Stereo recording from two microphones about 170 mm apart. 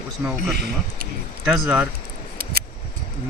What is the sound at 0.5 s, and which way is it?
Speech, 70° right (ahead or behind).